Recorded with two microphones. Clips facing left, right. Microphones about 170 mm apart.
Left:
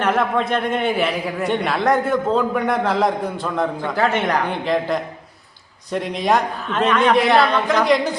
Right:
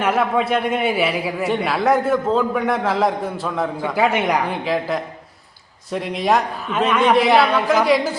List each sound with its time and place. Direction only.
0.0 s a man's voice: 5° right (ahead or behind)